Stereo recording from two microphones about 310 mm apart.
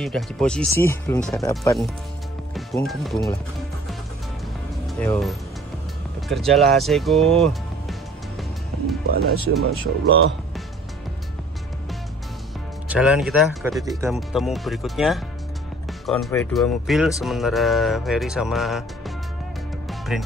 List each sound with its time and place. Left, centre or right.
0.0 s speech: centre
4.8 s speech: centre
9.6 s speech: right
12.8 s speech: centre